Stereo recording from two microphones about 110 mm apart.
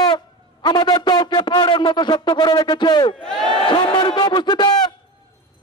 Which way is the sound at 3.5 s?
50° left (ahead or behind).